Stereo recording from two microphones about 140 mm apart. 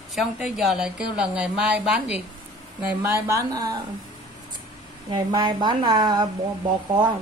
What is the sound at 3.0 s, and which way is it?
Speech, 20° right (ahead or behind).